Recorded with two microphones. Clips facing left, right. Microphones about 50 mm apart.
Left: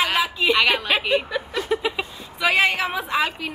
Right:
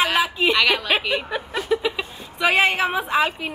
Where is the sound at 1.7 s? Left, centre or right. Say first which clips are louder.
Right 2 dB; centre.